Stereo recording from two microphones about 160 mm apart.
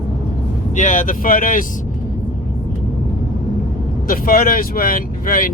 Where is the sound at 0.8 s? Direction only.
50° left (ahead or behind).